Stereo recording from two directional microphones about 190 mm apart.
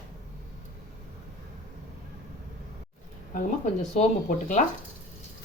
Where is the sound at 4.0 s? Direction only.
40° left (ahead or behind).